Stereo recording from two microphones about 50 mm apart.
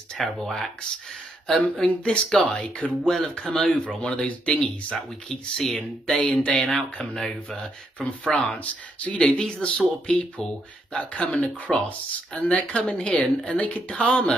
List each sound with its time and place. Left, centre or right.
0.2 s speech: centre
5.6 s speech: centre; by 6.7 s left
7.2 s speech: centre